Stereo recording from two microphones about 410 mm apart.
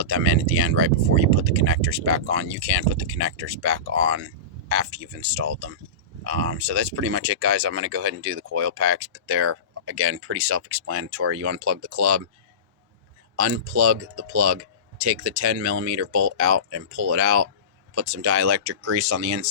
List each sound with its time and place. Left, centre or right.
0.0 s speech: right
13.3 s speech: right